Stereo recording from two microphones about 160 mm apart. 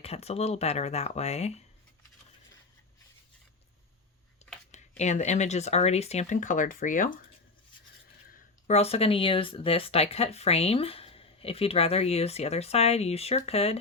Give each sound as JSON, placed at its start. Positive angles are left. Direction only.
{"t": 0.0, "sound": "speech", "side_deg": 40}
{"t": 4.7, "sound": "speech", "side_deg": 45}
{"t": 8.6, "sound": "speech", "side_deg": 40}